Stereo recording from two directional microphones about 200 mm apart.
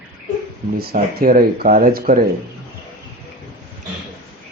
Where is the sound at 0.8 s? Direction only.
45° right (ahead or behind).